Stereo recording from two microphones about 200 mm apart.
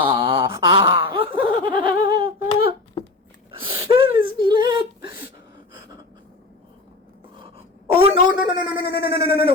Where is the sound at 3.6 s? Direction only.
25° right (ahead or behind).